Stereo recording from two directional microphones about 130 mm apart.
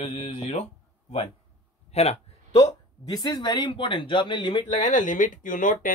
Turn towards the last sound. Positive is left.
turn(degrees=90)